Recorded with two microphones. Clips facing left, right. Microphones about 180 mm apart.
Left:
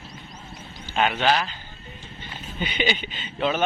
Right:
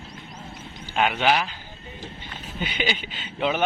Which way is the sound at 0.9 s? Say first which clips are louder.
Even; 5° right (ahead or behind).